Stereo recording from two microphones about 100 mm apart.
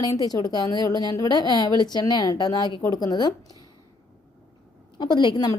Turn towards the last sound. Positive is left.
turn(degrees=45)  # may be behind; listen again after turning